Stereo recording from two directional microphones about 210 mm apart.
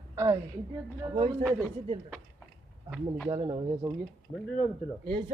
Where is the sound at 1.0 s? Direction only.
20° right (ahead or behind).